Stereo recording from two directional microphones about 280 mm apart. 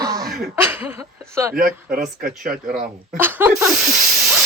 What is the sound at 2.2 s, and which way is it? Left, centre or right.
Speech, right.